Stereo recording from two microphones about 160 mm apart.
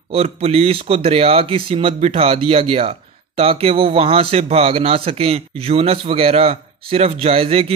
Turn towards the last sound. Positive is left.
turn(degrees=-35)  # may be behind; listen again after turning